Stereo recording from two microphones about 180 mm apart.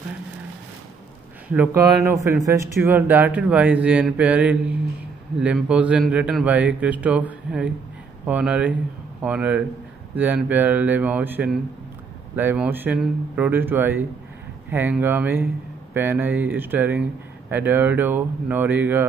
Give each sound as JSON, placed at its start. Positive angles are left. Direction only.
{"t": 1.5, "sound": "speech", "side_deg": -10}